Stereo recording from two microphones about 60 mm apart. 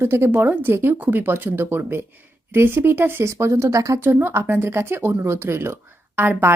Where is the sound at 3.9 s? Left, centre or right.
Right.